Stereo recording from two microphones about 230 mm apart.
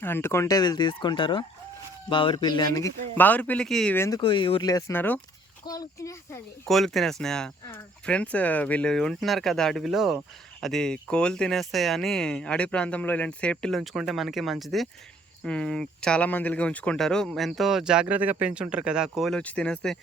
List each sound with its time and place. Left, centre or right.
0.0 s speech: centre
3.2 s speech: centre
4.2 s speech: left
6.7 s speech: centre